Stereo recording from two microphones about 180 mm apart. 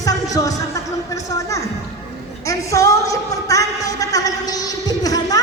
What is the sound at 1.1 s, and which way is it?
Speech, 15° left (ahead or behind).